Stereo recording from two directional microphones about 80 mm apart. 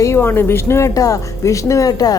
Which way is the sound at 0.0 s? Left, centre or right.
Left.